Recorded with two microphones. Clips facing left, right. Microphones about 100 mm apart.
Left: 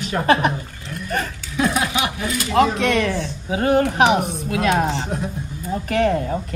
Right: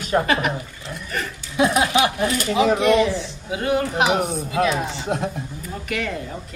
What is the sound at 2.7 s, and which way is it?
Speech, 75° left (ahead or behind).